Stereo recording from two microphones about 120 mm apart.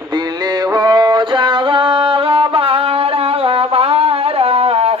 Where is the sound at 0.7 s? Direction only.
35° right (ahead or behind).